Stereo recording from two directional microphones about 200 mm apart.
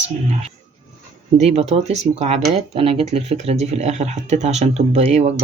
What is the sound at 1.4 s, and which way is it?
Speech, 35° right (ahead or behind).